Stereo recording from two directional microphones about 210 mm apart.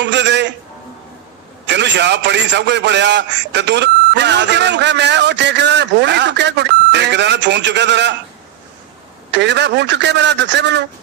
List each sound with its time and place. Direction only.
0.0 s a man's voice: 55° right (ahead or behind)
1.6 s a man's voice: 55° right (ahead or behind)
9.3 s a man's voice: 55° right (ahead or behind)